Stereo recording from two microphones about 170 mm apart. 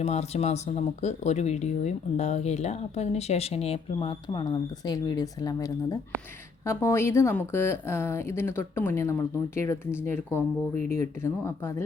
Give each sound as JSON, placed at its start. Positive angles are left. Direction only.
{"t": 0.0, "sound": "speech", "side_deg": 40}
{"t": 10.8, "sound": "speech", "side_deg": -45}
{"t": 11.2, "sound": "speech", "side_deg": 15}